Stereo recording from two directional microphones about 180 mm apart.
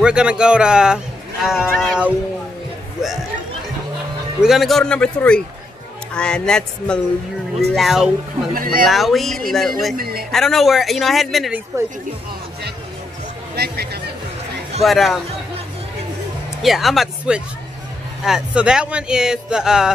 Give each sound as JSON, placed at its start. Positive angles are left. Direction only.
{"t": 0.0, "sound": "speech", "side_deg": -5}
{"t": 4.4, "sound": "speech", "side_deg": 0}
{"t": 8.5, "sound": "speech", "side_deg": -55}
{"t": 8.8, "sound": "speech", "side_deg": 0}
{"t": 9.9, "sound": "a woman's voice", "side_deg": -55}
{"t": 10.3, "sound": "speech", "side_deg": 0}
{"t": 13.6, "sound": "speech", "side_deg": -60}
{"t": 14.8, "sound": "speech", "side_deg": 0}
{"t": 16.6, "sound": "speech", "side_deg": 0}